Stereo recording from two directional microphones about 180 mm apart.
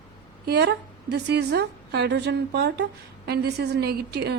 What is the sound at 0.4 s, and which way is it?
A woman's voice, 65° right (ahead or behind).